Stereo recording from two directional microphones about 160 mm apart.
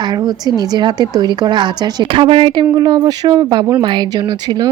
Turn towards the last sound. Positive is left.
turn(degrees=-25)  # may be behind; listen again after turning